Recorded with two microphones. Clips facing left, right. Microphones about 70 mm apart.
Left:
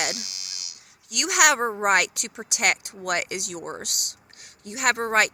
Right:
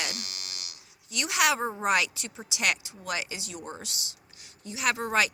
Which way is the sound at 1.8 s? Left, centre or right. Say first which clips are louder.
Left 5 dB; left.